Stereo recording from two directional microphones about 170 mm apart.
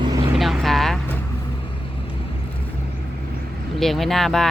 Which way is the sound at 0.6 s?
Centre (ahead or behind).